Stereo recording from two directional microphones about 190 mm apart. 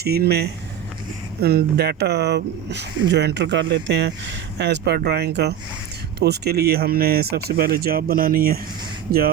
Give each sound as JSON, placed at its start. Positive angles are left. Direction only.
{"t": 0.0, "sound": "speech", "side_deg": -55}